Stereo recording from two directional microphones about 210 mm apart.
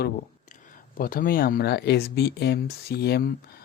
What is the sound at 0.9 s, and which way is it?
Speech, 40° left (ahead or behind).